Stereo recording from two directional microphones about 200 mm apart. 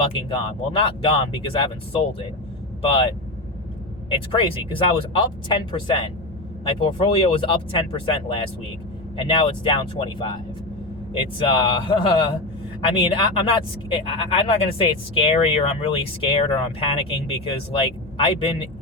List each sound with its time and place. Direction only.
0.0 s speech: 25° left (ahead or behind)
2.8 s speech: 25° left (ahead or behind)
4.1 s speech: 25° left (ahead or behind)